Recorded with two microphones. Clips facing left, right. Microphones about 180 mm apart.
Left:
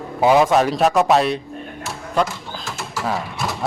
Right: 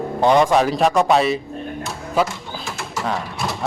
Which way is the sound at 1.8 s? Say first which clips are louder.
Even; 5° right (ahead or behind).